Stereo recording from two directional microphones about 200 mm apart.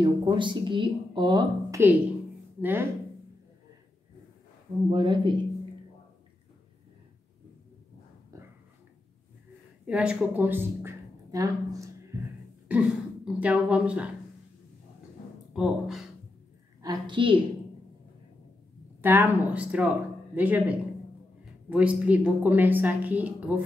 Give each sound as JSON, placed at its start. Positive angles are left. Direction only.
{"t": 0.0, "sound": "a woman's voice", "side_deg": -20}
{"t": 4.9, "sound": "speech", "side_deg": -25}
{"t": 9.8, "sound": "a woman's voice", "side_deg": -5}
{"t": 12.6, "sound": "speech", "side_deg": -5}
{"t": 15.5, "sound": "speech", "side_deg": -5}
{"t": 16.8, "sound": "a woman's voice", "side_deg": -20}
{"t": 18.9, "sound": "a woman's voice", "side_deg": -10}